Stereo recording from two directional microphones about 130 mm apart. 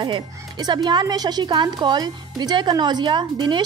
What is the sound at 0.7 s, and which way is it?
A woman's voice, 35° right (ahead or behind).